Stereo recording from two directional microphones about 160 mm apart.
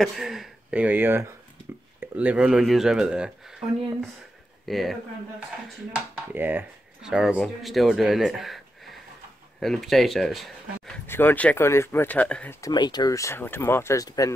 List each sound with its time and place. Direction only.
0.0 s speech: centre (ahead or behind)
6.3 s speech: 10° right (ahead or behind)
11.1 s speech: 10° left (ahead or behind)
12.5 s speech: 25° left (ahead or behind)